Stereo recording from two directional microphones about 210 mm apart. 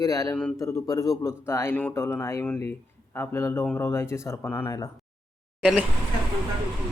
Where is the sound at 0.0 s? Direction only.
15° left (ahead or behind).